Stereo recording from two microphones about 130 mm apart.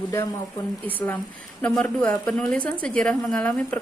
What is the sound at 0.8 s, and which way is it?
A woman's voice, 15° left (ahead or behind).